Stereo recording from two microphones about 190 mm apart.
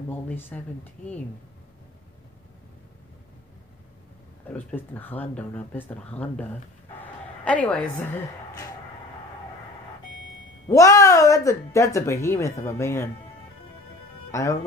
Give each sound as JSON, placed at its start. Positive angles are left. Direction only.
{"t": 0.1, "sound": "speech", "side_deg": 10}
{"t": 4.6, "sound": "speech", "side_deg": 10}
{"t": 10.7, "sound": "speech", "side_deg": 15}
{"t": 14.3, "sound": "speech", "side_deg": 15}